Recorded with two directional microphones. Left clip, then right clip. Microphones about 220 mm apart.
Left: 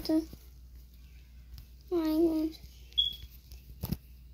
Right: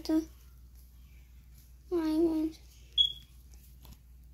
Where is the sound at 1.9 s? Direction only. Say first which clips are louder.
Left 1 dB; 5° right (ahead or behind).